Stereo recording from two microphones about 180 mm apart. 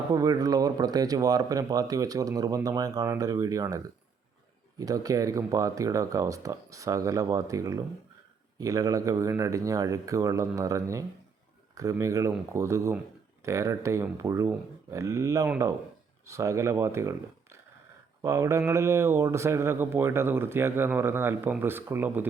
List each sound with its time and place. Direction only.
0.1 s speech: 20° right (ahead or behind)
4.8 s speech: 20° right (ahead or behind)